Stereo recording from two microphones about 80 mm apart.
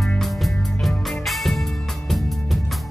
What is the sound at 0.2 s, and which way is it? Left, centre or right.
Music, centre.